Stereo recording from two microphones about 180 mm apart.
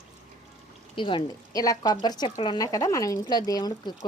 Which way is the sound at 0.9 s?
25° left (ahead or behind).